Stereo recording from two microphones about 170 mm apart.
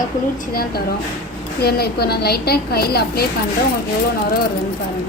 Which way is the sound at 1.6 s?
65° left (ahead or behind).